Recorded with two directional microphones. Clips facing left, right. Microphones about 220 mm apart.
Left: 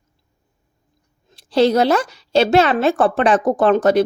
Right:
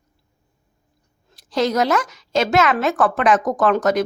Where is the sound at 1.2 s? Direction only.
30° left (ahead or behind).